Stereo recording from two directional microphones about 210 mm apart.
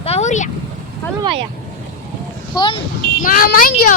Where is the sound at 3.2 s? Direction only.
40° left (ahead or behind).